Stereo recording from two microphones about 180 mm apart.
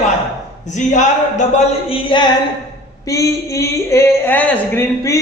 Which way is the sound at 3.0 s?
15° left (ahead or behind).